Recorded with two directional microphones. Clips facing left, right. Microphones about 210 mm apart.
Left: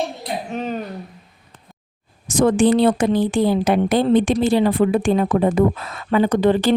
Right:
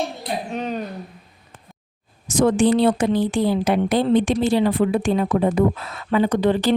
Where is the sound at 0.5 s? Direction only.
Centre (ahead or behind).